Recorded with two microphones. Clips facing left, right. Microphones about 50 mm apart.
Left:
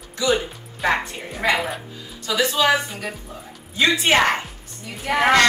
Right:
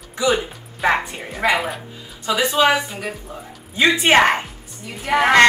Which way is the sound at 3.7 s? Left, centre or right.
Right.